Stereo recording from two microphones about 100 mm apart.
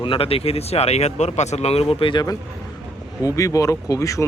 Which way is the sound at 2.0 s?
55° left (ahead or behind).